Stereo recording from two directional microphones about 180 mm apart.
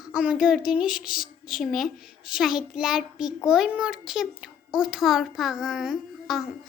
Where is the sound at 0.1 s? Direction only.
5° right (ahead or behind).